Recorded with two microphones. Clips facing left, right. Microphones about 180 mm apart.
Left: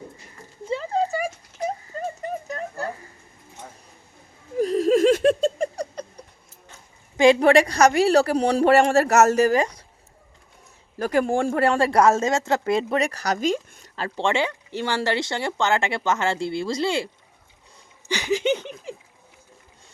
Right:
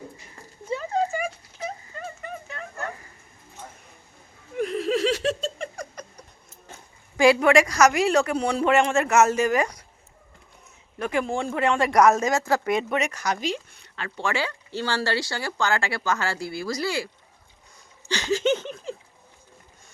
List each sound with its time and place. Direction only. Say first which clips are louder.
0.7 s clip-clop: left 1 dB; 25° left (ahead or behind)
4.5 s laughter: left 6 dB; 35° left (ahead or behind); by 5.6 s 50° left (ahead or behind)
5.7 s cat: left 6 dB; 35° left (ahead or behind)
7.3 s speech: left 2 dB; 30° left (ahead or behind)
9.6 s speech: left 2 dB; 30° left (ahead or behind)
10.9 s speech: left 5 dB; 40° left (ahead or behind)
18.1 s laughter: left 1 dB; 15° left (ahead or behind)